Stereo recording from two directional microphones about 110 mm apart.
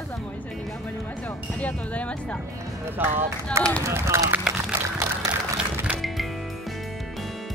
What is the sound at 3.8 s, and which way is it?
Speech, 25° right (ahead or behind).